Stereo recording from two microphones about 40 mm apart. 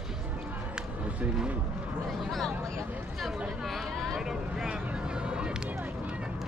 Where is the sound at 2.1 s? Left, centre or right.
Centre.